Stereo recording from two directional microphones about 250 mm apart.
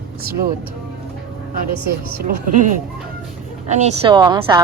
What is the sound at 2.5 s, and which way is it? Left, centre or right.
A woman's voice, right.